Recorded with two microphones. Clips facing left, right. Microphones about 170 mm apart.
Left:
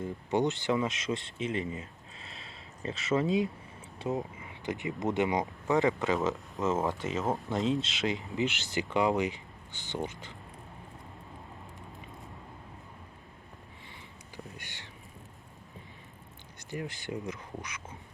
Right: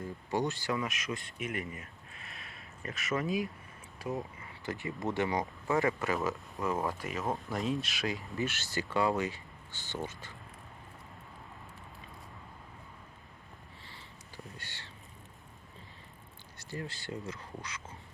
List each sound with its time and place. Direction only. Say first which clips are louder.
0.0 s speech: left 4 dB; 20° left (ahead or behind)
14.5 s a sound: left 2 dB; 15° left (ahead or behind)
16.6 s speech: left 3 dB; 20° left (ahead or behind)